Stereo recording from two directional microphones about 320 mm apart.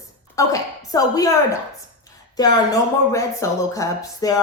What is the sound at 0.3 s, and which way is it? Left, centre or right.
Speech, centre.